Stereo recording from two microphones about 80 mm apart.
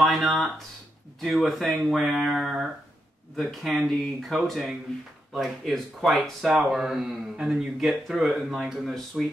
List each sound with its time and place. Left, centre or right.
0.0 s speech: centre